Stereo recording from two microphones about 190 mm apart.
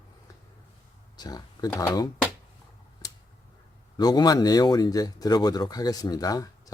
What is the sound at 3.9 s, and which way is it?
Speech, 20° left (ahead or behind).